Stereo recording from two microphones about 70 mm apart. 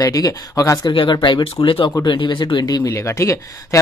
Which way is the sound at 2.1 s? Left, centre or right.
Left.